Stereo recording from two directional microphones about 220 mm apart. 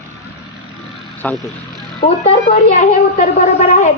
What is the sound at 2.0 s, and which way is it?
Speech, 40° left (ahead or behind).